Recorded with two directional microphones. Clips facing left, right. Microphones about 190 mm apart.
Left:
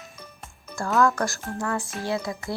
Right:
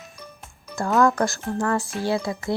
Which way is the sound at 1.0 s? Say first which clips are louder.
Right 4 dB; 20° right (ahead or behind).